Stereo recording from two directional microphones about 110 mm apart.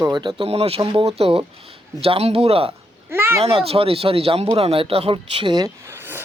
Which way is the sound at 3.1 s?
20° right (ahead or behind).